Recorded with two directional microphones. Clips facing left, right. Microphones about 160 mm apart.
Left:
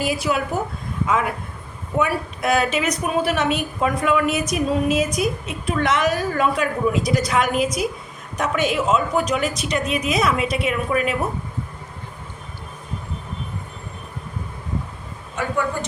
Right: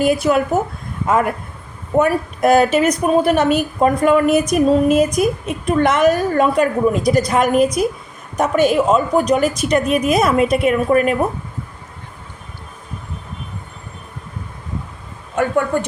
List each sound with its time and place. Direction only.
0.0 s a woman's voice: 50° right (ahead or behind)
15.4 s a woman's voice: 55° right (ahead or behind)